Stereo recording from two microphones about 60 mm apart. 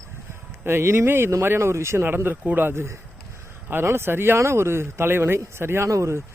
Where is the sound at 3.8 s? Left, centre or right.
Right.